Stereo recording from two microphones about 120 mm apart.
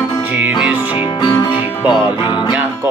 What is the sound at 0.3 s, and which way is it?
Music, 10° right (ahead or behind).